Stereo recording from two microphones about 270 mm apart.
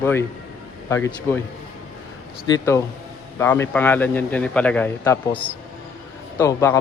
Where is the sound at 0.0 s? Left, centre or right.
Centre.